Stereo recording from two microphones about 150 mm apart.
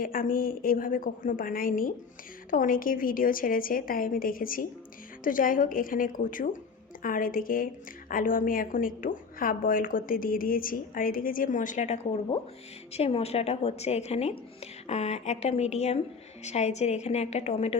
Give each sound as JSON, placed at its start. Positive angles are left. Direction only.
{"t": 0.0, "sound": "a woman's voice", "side_deg": 70}